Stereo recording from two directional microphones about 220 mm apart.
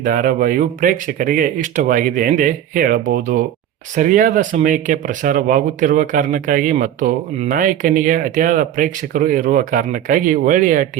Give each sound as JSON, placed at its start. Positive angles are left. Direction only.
{"t": 0.0, "sound": "speech", "side_deg": -40}